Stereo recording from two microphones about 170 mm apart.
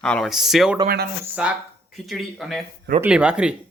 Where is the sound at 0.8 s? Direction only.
65° right (ahead or behind).